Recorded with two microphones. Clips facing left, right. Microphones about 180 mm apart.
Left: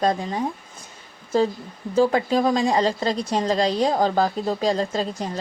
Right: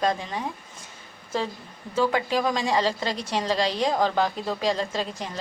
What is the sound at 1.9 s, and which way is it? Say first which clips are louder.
A woman's voice: left 5 dB; 35° left (ahead or behind).